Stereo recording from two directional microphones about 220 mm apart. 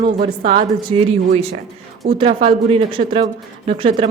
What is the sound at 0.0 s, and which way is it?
A woman's voice, 25° right (ahead or behind).